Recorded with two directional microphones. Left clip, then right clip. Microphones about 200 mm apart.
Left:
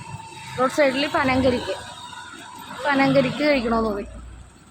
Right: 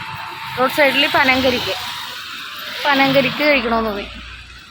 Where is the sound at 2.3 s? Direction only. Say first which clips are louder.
Right 9 dB; 45° left (ahead or behind).